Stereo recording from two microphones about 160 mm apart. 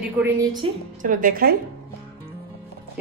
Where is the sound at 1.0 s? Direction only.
55° right (ahead or behind).